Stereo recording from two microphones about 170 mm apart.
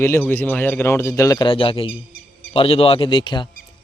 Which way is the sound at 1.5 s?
30° left (ahead or behind).